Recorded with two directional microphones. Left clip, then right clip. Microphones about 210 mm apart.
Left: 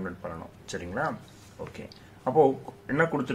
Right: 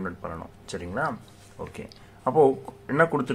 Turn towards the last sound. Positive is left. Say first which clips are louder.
# right 4 dB
turn(degrees=-15)  # may be behind; listen again after turning